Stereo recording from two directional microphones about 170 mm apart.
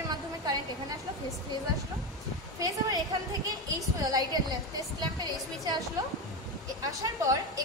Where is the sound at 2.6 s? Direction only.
20° right (ahead or behind).